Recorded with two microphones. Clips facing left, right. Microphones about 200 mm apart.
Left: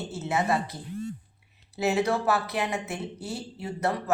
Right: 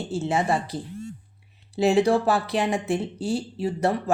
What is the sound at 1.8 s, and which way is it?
Speech, 30° right (ahead or behind).